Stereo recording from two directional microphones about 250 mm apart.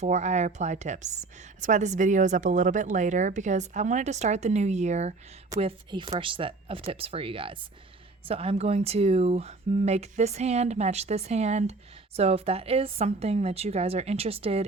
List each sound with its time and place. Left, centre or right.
0.0 s a woman's voice: right